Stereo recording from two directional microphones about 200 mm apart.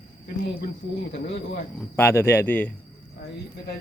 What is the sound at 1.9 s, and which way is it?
Speech, 10° left (ahead or behind).